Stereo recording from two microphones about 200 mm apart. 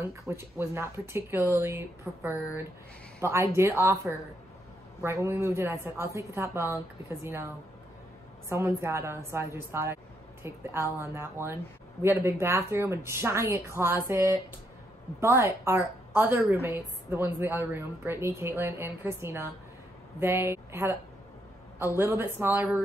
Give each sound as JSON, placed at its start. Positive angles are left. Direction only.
{"t": 0.3, "sound": "a woman's voice", "side_deg": -10}
{"t": 8.5, "sound": "a woman's voice", "side_deg": -15}